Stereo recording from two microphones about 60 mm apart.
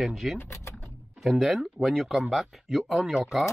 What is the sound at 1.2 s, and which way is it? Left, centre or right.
Speech, centre.